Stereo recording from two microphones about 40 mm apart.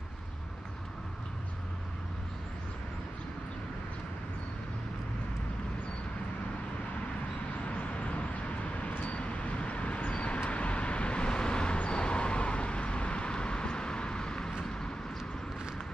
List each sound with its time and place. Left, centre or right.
7.6 s vehicle: left; by 14.9 s centre